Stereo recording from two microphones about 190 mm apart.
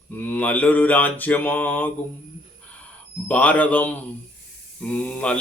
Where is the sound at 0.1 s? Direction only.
10° left (ahead or behind).